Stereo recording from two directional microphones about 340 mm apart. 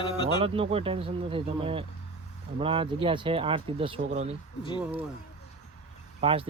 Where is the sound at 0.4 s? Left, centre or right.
Centre.